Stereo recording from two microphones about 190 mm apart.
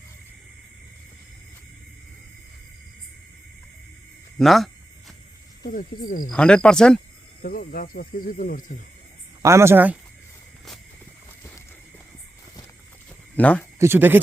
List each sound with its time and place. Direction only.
4.4 s a sound: centre (ahead or behind)
5.6 s speech: 50° left (ahead or behind)
6.3 s speech: 5° left (ahead or behind)
7.4 s speech: 50° left (ahead or behind)
9.4 s speech: 15° right (ahead or behind)
13.3 s speech: 10° left (ahead or behind)
13.7 s speech: 10° right (ahead or behind)